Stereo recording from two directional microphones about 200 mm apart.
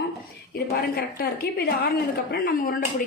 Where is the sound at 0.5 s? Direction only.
50° left (ahead or behind).